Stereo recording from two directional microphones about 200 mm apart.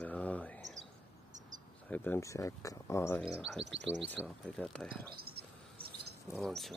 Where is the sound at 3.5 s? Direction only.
60° right (ahead or behind).